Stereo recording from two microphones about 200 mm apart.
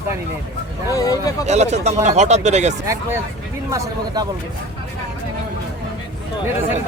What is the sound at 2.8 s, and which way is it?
Speech, 15° right (ahead or behind).